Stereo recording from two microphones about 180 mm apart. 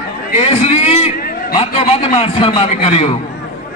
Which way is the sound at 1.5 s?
35° left (ahead or behind).